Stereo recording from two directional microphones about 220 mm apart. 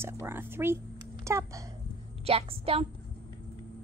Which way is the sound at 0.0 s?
10° right (ahead or behind).